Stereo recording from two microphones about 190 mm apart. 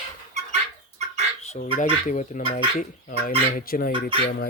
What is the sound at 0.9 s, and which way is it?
Fowl, 35° right (ahead or behind).